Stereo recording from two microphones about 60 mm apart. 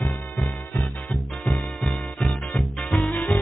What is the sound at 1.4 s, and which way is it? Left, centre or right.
Music, centre.